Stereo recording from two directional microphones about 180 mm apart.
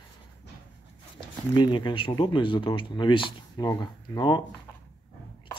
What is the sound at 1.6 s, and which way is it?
Speech, 25° left (ahead or behind).